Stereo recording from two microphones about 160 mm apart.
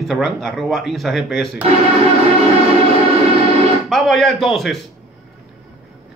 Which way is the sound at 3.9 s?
Centre (ahead or behind).